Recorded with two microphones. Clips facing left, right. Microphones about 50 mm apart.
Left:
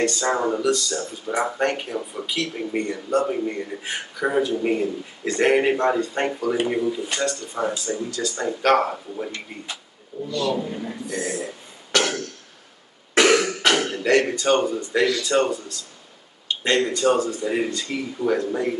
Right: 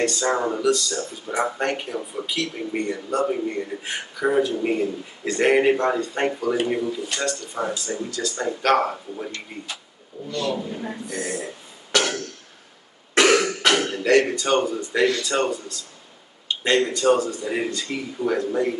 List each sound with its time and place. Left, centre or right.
0.0 s speech: centre
10.1 s a man's voice: right
11.1 s speech: centre
11.9 s throat clearing: centre
13.1 s cough: centre
13.6 s speech: centre
16.4 s a sound: centre
16.9 s speech: centre